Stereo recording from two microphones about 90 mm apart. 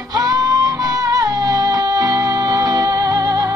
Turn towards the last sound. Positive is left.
turn(degrees=-45)  # may be behind; listen again after turning